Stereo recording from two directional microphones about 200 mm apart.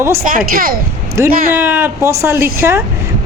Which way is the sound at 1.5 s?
10° right (ahead or behind).